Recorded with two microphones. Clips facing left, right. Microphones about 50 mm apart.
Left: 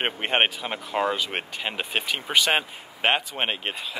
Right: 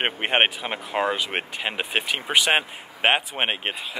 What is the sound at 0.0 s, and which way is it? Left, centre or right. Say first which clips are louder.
Speech: right 2 dB; centre.